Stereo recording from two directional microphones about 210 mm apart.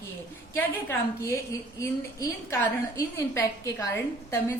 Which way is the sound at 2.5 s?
15° left (ahead or behind).